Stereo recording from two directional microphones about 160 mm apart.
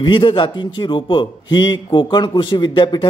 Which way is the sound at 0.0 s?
30° left (ahead or behind).